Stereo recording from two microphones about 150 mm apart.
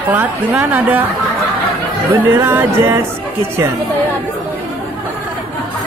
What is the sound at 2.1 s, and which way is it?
Music, 15° right (ahead or behind).